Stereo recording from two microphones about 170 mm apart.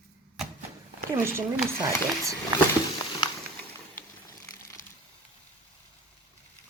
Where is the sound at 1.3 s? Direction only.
20° right (ahead or behind).